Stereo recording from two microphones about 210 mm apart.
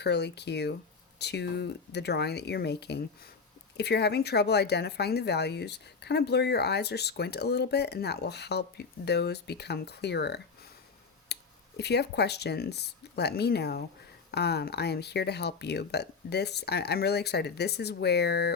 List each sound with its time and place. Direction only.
0.0 s speech: 50° left (ahead or behind)
11.3 s a sound: 50° left (ahead or behind)
11.8 s speech: 50° left (ahead or behind)